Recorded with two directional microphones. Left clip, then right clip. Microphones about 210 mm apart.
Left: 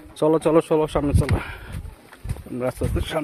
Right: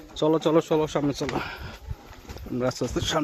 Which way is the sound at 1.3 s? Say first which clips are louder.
Even; centre (ahead or behind).